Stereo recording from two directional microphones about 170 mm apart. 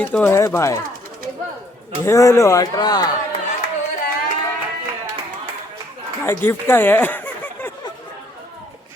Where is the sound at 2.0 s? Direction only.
15° left (ahead or behind).